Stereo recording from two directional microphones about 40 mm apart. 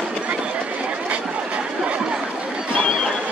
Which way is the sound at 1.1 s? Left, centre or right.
Right.